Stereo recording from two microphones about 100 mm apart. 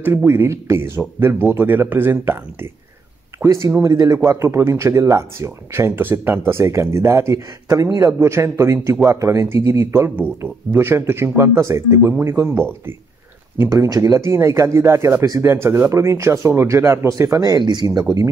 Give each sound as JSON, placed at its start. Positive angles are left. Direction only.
{"t": 0.0, "sound": "speech", "side_deg": -20}
{"t": 13.7, "sound": "speech", "side_deg": -35}
{"t": 14.2, "sound": "speech", "side_deg": -25}
{"t": 17.1, "sound": "speech", "side_deg": -40}